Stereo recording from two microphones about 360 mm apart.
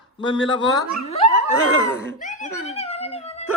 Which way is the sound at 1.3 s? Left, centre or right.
Right.